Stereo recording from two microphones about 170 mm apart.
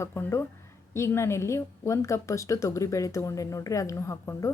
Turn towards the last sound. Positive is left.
turn(degrees=15)  # may be behind; listen again after turning